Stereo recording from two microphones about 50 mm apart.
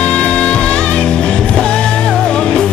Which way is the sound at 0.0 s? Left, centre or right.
Left.